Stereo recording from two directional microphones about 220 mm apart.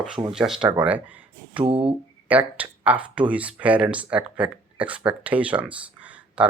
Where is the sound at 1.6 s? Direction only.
25° right (ahead or behind).